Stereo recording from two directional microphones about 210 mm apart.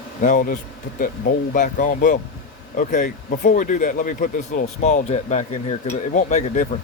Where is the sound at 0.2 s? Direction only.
40° left (ahead or behind).